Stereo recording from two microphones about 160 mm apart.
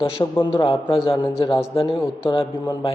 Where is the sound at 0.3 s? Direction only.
35° left (ahead or behind).